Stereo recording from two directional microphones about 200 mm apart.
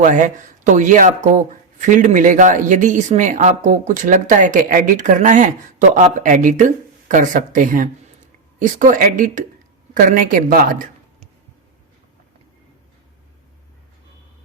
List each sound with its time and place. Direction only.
0.0 s speech: 40° right (ahead or behind)